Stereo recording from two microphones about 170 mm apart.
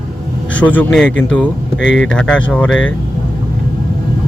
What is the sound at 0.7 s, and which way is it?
Speech, 5° left (ahead or behind).